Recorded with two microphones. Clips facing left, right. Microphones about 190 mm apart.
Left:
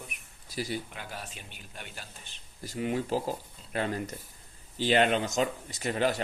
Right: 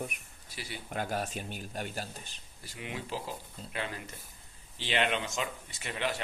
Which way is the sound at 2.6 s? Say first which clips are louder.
Left 10 dB; 40° left (ahead or behind).